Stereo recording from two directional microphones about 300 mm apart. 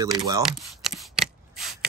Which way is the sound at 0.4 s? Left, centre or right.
Centre.